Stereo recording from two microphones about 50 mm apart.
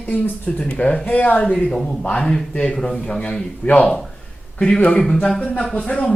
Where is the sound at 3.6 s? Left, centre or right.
Left.